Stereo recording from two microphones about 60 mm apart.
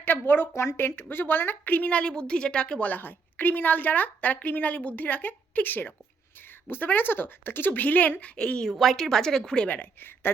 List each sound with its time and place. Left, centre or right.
0.0 s a woman's voice: left
0.5 s a woman's voice: left
8.4 s a woman's voice: centre
8.6 s a woman's voice: centre
9.6 s a woman's voice: left